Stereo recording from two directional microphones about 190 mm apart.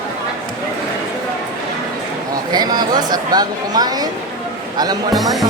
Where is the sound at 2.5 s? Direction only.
20° right (ahead or behind).